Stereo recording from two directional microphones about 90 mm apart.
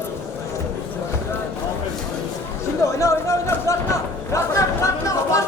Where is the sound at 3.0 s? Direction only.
35° left (ahead or behind).